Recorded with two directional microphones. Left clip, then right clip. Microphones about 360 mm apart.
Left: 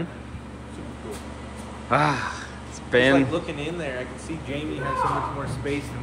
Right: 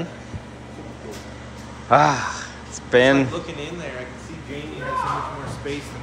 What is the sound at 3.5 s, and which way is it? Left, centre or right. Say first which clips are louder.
Speech: left 1 dB; left.